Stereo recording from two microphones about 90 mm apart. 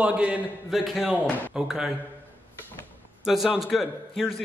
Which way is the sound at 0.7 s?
Centre (ahead or behind).